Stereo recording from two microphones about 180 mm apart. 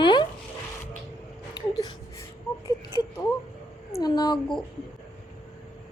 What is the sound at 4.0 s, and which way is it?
Speech, 20° left (ahead or behind).